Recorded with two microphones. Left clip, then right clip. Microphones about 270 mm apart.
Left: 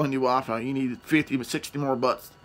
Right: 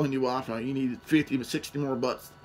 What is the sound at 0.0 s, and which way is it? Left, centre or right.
Speech, centre.